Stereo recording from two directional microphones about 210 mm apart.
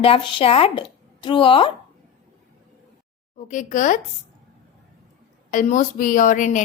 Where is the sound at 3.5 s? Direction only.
35° left (ahead or behind).